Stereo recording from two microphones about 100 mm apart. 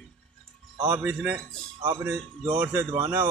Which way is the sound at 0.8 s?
20° right (ahead or behind).